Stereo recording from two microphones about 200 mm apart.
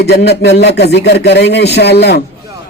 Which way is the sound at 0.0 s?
55° left (ahead or behind).